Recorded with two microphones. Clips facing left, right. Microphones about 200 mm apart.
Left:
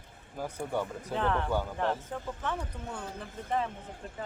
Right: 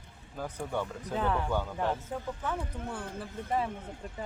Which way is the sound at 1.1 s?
5° right (ahead or behind).